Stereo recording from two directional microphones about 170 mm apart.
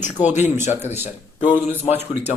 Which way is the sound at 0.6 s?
40° left (ahead or behind).